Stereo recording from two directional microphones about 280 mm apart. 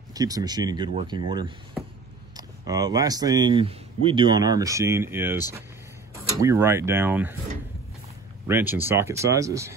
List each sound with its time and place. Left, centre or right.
0.1 s speech: centre
8.5 s speech: centre